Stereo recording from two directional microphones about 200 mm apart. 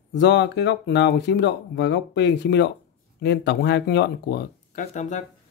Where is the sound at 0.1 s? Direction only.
60° left (ahead or behind).